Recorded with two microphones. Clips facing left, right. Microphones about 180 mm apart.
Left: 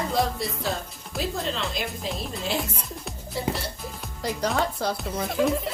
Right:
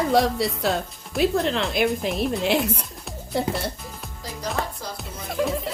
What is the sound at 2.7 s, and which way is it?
Music, centre (ahead or behind).